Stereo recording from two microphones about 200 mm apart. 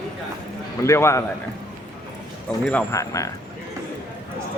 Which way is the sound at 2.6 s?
10° left (ahead or behind).